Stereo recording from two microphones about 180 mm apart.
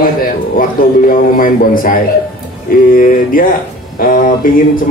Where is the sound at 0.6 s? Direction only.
50° left (ahead or behind).